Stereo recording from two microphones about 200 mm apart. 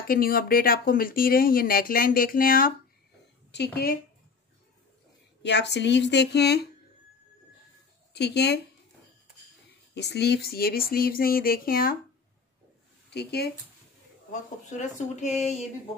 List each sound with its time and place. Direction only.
0.1 s speech: 45° left (ahead or behind)
5.4 s speech: 60° left (ahead or behind)
8.1 s speech: 55° left (ahead or behind)
9.9 s speech: 55° left (ahead or behind)
13.1 s speech: 55° left (ahead or behind)
14.8 s speech: 35° left (ahead or behind)